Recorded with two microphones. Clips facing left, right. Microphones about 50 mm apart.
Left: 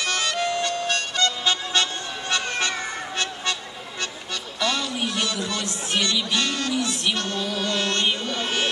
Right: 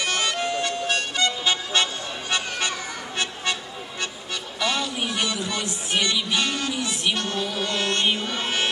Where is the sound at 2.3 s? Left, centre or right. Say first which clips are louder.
Left 2 dB; centre.